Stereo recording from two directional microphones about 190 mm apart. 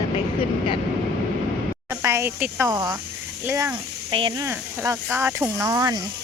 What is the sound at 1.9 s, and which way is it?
Speech, 15° right (ahead or behind).